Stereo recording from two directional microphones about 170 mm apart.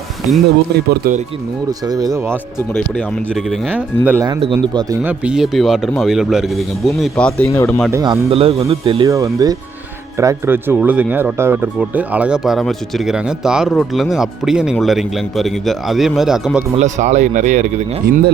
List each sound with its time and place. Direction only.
0.7 s speech: 70° right (ahead or behind)
1.8 s speech: 20° right (ahead or behind)
2.9 s speech: 5° left (ahead or behind)
4.0 s speech: 10° right (ahead or behind)
4.3 s speech: 30° right (ahead or behind)
5.0 s speech: 5° right (ahead or behind)
7.5 s speech: 15° left (ahead or behind)
7.9 s speech: 15° right (ahead or behind)
8.3 s speech: 35° right (ahead or behind)
9.0 s speech: 20° right (ahead or behind)
16.7 s speech: 40° right (ahead or behind)